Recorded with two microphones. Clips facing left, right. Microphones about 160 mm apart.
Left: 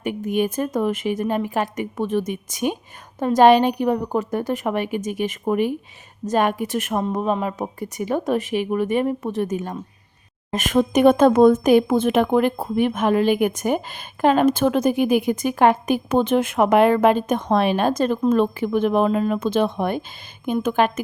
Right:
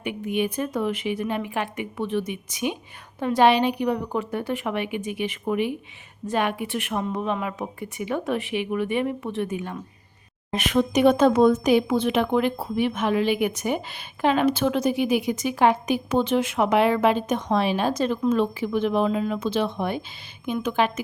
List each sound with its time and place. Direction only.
0.0 s a woman's voice: 40° left (ahead or behind)